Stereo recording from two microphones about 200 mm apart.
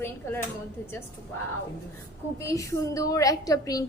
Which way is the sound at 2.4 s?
15° left (ahead or behind).